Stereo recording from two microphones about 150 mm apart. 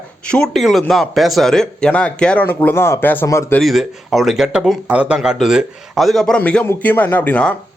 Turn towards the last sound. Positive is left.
turn(degrees=10)  # may be behind; listen again after turning